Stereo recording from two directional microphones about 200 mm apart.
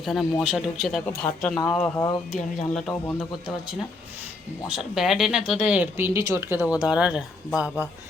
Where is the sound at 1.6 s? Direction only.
15° left (ahead or behind).